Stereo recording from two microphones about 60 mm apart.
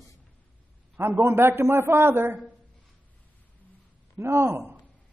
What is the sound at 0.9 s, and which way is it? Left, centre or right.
A man's voice, right.